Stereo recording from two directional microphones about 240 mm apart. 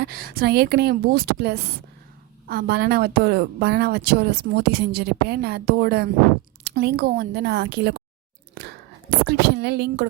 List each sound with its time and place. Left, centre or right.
0.0 s speech: right
8.5 s whispering: right